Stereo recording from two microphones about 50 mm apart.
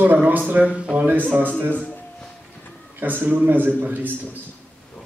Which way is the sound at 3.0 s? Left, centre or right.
Right.